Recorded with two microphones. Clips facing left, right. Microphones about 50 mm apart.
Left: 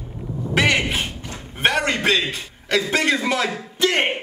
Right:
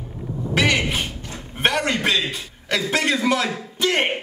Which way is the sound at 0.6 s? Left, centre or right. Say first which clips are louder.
Left 1 dB; centre.